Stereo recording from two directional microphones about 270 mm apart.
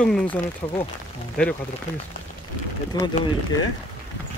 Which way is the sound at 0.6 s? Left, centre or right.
Centre.